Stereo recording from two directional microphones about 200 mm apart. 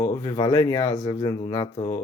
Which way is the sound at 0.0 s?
20° left (ahead or behind).